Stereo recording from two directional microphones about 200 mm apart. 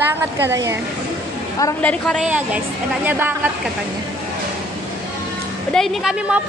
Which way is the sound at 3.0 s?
10° right (ahead or behind).